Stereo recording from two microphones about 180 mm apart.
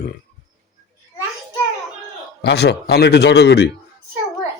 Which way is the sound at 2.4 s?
65° left (ahead or behind).